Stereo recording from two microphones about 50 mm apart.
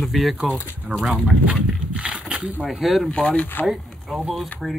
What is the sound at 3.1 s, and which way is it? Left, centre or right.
Speech, centre.